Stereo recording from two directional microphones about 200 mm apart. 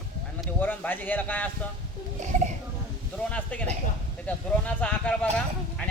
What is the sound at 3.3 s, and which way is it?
Speech, 10° left (ahead or behind).